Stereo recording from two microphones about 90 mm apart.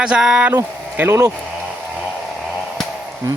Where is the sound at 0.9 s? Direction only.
25° right (ahead or behind).